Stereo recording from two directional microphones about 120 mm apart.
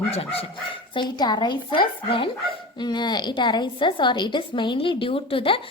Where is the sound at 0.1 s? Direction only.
55° left (ahead or behind).